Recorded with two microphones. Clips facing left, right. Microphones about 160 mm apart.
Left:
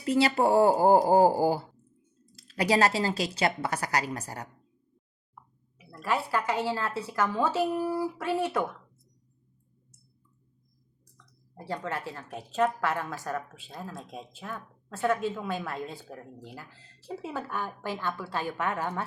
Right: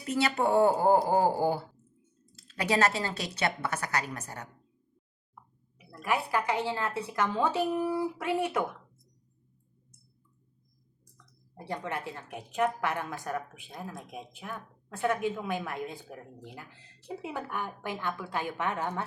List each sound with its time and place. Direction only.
0.1 s a woman's voice: 35° left (ahead or behind)
6.0 s a woman's voice: 15° right (ahead or behind)
11.5 s a woman's voice: 20° right (ahead or behind)